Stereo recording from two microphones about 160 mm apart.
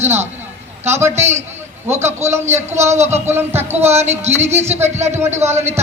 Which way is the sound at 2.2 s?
15° right (ahead or behind).